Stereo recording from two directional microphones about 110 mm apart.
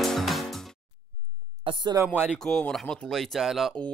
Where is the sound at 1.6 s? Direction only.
45° right (ahead or behind).